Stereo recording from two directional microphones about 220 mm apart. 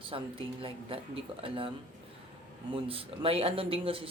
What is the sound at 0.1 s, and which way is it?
Speech, 25° right (ahead or behind).